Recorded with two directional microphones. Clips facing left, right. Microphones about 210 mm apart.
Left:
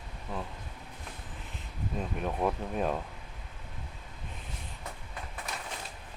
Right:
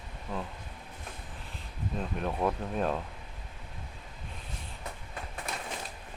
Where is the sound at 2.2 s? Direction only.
5° left (ahead or behind).